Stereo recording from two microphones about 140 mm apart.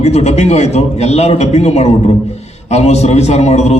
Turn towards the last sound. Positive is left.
turn(degrees=50)  # may be behind; listen again after turning